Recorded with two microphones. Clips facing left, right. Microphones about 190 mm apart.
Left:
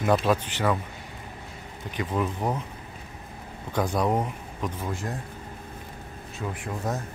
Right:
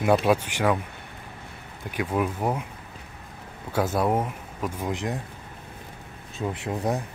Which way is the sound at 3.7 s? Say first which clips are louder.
Right 1 dB; 5° right (ahead or behind).